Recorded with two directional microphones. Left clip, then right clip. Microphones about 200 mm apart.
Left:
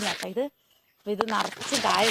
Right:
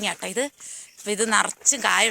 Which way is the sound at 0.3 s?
Centre (ahead or behind).